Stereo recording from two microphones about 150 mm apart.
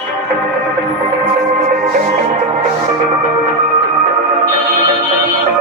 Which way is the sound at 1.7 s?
55° right (ahead or behind).